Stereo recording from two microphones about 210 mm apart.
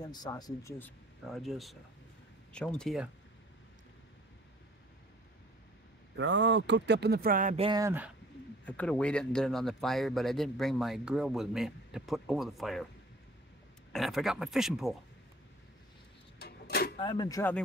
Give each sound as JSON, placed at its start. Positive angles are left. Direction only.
{"t": 0.0, "sound": "speech", "side_deg": 20}
{"t": 6.1, "sound": "speech", "side_deg": -60}
{"t": 7.8, "sound": "speech", "side_deg": -10}
{"t": 8.6, "sound": "speech", "side_deg": 5}
{"t": 13.9, "sound": "speech", "side_deg": 0}
{"t": 16.3, "sound": "a sound", "side_deg": 50}
{"t": 17.0, "sound": "speech", "side_deg": 20}